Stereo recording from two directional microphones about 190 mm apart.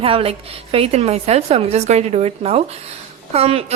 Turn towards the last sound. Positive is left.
turn(degrees=-30)  # may be behind; listen again after turning